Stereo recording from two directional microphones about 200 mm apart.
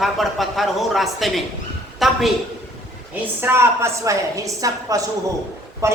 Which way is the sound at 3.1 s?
10° right (ahead or behind).